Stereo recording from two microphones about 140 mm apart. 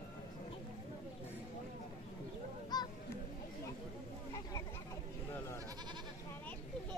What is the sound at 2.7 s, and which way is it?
Honk, 30° left (ahead or behind).